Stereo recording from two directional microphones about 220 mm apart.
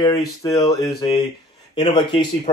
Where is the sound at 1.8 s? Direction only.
20° left (ahead or behind).